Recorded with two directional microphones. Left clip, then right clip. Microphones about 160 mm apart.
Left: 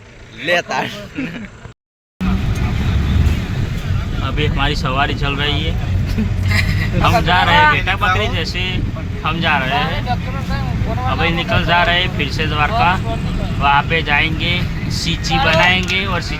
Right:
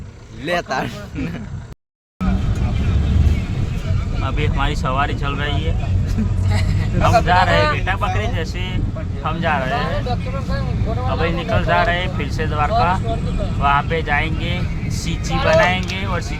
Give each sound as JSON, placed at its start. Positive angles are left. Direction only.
{"t": 0.4, "sound": "speech", "side_deg": -90}
{"t": 4.2, "sound": "speech", "side_deg": 25}
{"t": 7.0, "sound": "speech", "side_deg": 25}
{"t": 11.1, "sound": "speech", "side_deg": 25}